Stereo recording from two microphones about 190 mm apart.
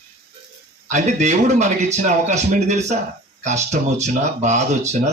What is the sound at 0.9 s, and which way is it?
Speech, 35° right (ahead or behind).